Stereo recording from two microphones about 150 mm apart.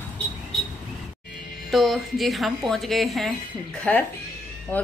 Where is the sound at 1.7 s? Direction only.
Centre (ahead or behind).